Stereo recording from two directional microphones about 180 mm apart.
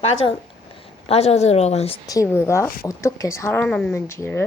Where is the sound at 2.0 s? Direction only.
15° left (ahead or behind).